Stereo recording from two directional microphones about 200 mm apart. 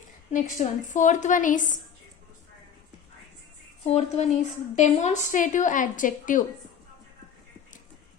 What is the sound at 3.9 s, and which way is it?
A woman's voice, 35° left (ahead or behind).